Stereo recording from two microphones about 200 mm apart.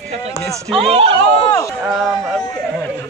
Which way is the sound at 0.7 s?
30° right (ahead or behind).